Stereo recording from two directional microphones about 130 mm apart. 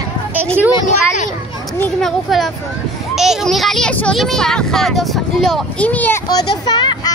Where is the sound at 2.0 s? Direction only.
Centre (ahead or behind).